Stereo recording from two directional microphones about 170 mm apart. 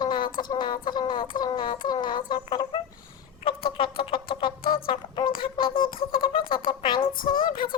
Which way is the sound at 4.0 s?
30° left (ahead or behind).